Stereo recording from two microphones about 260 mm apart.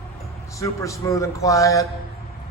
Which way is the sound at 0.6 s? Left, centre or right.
Centre.